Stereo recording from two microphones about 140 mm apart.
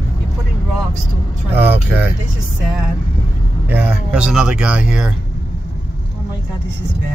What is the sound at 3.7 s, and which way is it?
Speech, 10° right (ahead or behind).